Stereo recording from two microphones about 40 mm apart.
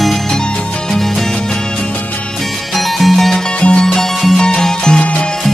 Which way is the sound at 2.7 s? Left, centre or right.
Centre.